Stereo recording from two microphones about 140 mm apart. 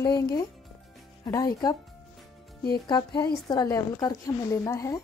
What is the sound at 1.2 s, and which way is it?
Speech, 25° left (ahead or behind).